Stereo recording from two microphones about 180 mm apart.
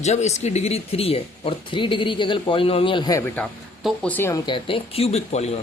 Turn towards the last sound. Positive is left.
turn(degrees=35)  # may be behind; listen again after turning